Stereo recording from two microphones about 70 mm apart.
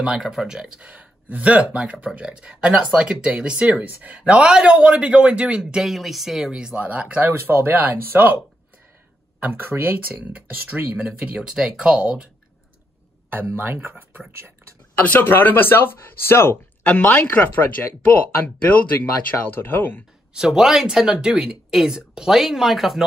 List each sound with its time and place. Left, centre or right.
0.0 s speech: centre
7.2 s speech: right
9.4 s speech: right
13.3 s speech: right
15.0 s speech: left
16.8 s speech: centre
20.3 s speech: centre